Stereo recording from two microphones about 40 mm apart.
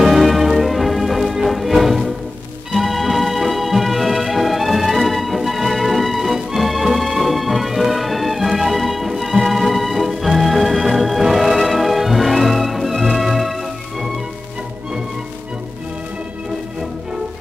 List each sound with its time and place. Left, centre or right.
0.0 s music: centre